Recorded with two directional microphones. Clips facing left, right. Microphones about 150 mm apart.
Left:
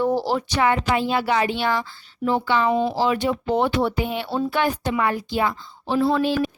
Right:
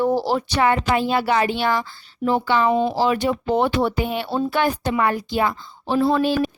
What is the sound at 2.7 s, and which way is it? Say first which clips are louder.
Speech: right 2 dB; 20° right (ahead or behind).